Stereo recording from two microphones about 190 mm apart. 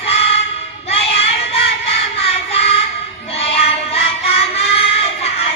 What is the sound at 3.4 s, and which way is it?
Music, 30° left (ahead or behind).